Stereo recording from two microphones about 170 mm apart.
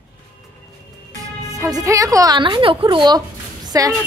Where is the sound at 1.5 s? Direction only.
20° right (ahead or behind).